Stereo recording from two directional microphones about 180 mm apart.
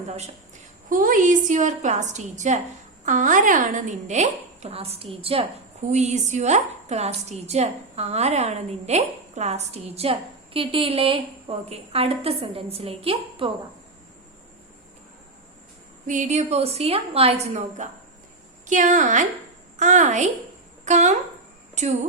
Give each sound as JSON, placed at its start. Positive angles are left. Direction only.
{"t": 0.9, "sound": "a woman's voice", "side_deg": -50}
{"t": 16.0, "sound": "a woman's voice", "side_deg": -40}